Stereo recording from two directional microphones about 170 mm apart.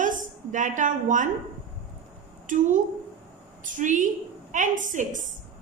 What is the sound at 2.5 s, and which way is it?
A woman's voice, 50° right (ahead or behind).